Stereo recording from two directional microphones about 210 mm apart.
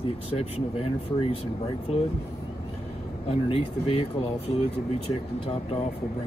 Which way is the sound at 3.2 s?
25° left (ahead or behind).